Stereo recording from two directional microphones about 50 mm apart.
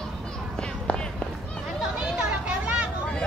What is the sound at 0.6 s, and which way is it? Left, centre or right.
Run, centre.